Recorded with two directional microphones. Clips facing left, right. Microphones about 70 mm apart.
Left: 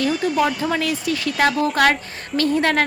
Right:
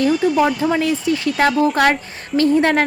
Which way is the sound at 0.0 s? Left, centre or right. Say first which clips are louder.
Right 4 dB; right.